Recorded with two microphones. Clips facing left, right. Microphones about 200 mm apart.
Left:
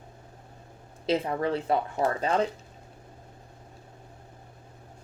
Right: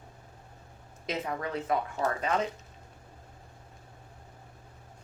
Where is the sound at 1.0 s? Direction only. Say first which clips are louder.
Left 7 dB; 30° left (ahead or behind).